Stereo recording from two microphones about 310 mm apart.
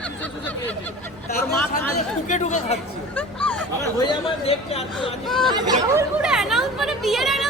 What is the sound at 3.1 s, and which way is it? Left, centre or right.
Hubbub, centre.